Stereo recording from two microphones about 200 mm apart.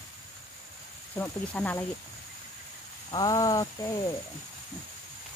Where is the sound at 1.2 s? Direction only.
10° left (ahead or behind).